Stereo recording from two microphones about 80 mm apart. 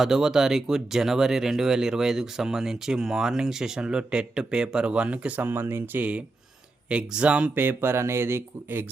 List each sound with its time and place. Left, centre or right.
0.0 s speech: centre
7.5 s speech: right